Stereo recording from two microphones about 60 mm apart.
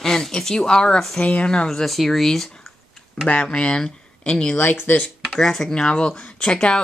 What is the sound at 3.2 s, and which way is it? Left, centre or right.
Speech, left.